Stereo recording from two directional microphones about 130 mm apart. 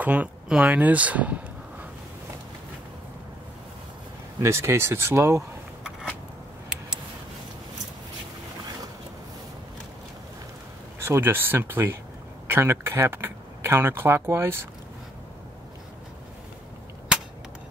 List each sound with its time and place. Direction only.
0.0 s speech: 10° right (ahead or behind)
4.4 s speech: 20° right (ahead or behind)
11.1 s speech: 15° right (ahead or behind)